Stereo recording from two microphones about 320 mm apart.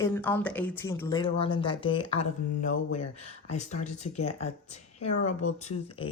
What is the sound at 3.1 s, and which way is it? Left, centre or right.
Speech, left.